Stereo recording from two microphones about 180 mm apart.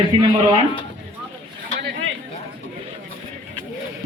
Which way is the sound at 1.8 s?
70° right (ahead or behind).